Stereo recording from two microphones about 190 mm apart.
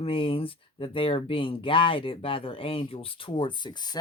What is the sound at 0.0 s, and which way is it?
Speech, 30° left (ahead or behind).